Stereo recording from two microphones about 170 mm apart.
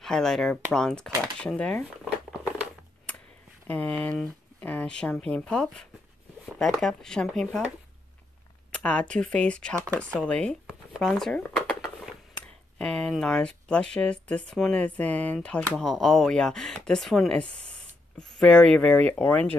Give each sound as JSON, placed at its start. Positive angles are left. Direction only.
{"t": 0.0, "sound": "speech", "side_deg": 5}
{"t": 3.6, "sound": "speech", "side_deg": 10}
{"t": 8.7, "sound": "speech", "side_deg": 5}